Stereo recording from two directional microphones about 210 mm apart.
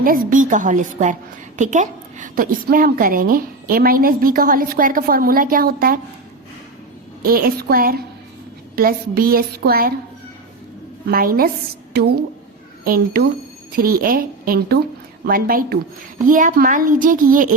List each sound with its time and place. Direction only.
0.0 s a woman's voice: 40° right (ahead or behind)
7.2 s a woman's voice: 45° right (ahead or behind)
11.0 s a woman's voice: 45° right (ahead or behind)